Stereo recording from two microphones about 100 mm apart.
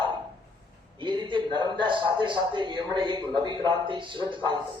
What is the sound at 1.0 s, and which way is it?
A man's voice, 50° right (ahead or behind).